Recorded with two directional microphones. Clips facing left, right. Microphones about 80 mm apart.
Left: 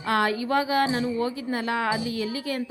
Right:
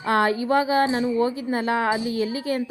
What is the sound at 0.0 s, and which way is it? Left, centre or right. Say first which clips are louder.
A woman's voice: right 3 dB; right.